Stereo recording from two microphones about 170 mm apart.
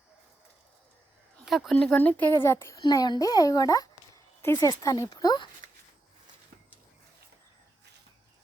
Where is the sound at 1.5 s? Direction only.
Centre (ahead or behind); by 5.5 s 25° left (ahead or behind).